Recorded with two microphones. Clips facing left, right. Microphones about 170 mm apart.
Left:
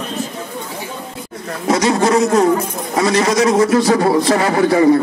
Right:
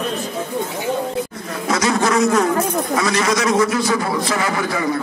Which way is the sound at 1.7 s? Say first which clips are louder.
Left 4 dB; 30° left (ahead or behind).